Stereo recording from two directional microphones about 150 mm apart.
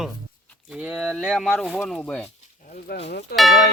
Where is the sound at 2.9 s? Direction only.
90° left.